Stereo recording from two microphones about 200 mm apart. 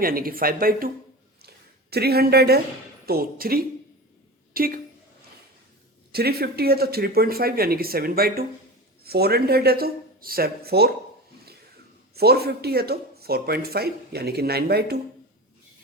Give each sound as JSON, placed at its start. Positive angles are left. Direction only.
{"t": 0.0, "sound": "speech", "side_deg": -45}
{"t": 1.4, "sound": "a sound", "side_deg": -50}
{"t": 3.1, "sound": "a woman's voice", "side_deg": -45}
{"t": 6.1, "sound": "speech", "side_deg": -50}
{"t": 12.1, "sound": "speech", "side_deg": -50}